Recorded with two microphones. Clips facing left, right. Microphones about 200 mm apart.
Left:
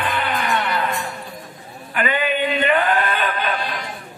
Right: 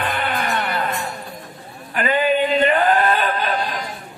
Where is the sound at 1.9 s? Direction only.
40° right (ahead or behind).